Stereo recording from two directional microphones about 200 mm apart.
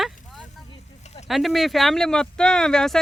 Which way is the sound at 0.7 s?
30° left (ahead or behind).